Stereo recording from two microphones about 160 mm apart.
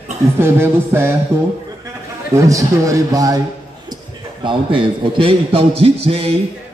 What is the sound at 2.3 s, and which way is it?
Speech, 20° right (ahead or behind).